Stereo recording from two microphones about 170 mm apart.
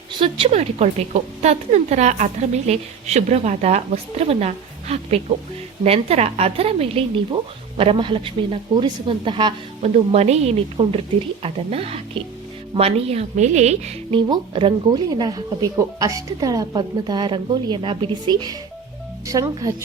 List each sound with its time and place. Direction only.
0.2 s a woman's voice: 35° right (ahead or behind)
9.8 s a woman's voice: 40° right (ahead or behind)
14.2 s speech: 30° right (ahead or behind)